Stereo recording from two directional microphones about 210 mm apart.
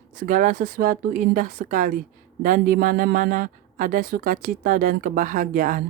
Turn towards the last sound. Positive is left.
turn(degrees=-40)  # may be behind; listen again after turning